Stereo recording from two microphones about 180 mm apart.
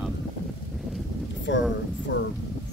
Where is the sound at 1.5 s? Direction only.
80° left.